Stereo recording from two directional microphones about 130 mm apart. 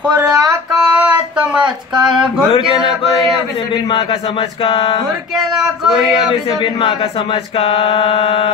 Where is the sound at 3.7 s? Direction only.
40° left (ahead or behind).